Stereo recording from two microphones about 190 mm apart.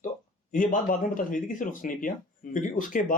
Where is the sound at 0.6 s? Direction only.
45° left (ahead or behind).